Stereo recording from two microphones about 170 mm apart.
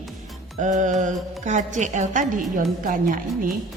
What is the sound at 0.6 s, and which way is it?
A woman's voice, 45° right (ahead or behind).